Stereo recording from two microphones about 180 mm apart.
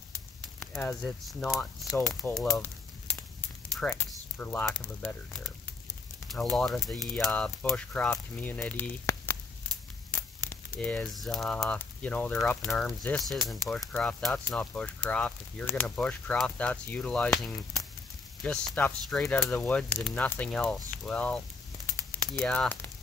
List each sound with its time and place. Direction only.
0.6 s a sound: 15° left (ahead or behind)
1.0 s speech: centre (ahead or behind)
6.2 s speech: centre (ahead or behind)
10.5 s speech: 10° left (ahead or behind)
18.4 s speech: 5° left (ahead or behind)